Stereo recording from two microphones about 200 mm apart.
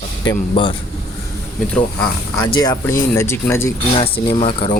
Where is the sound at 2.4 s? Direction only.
20° left (ahead or behind).